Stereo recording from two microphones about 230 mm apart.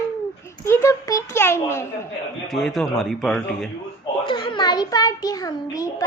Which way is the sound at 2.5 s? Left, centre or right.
Centre.